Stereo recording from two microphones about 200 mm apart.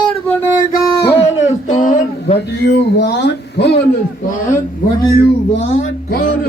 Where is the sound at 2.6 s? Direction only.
55° left (ahead or behind).